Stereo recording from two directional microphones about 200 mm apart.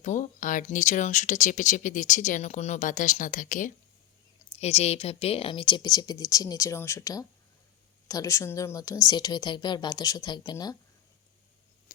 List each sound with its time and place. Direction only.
0.0 s speech: 40° left (ahead or behind); by 10.8 s 20° left (ahead or behind)